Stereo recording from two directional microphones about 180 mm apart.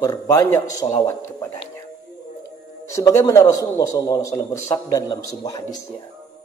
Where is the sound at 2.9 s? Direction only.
20° left (ahead or behind).